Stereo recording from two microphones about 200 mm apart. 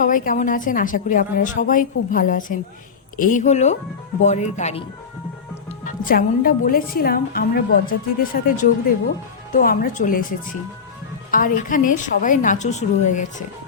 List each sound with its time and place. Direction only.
0.0 s a woman's voice: 40° left (ahead or behind)
5.8 s a woman's voice: 45° left (ahead or behind)
11.3 s a woman's voice: 45° left (ahead or behind)